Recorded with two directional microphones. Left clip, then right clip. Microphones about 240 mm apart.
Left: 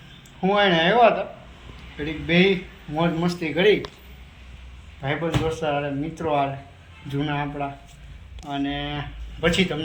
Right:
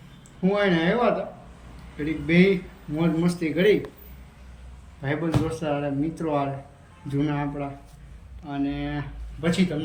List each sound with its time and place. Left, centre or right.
0.4 s speech: centre
5.0 s speech: centre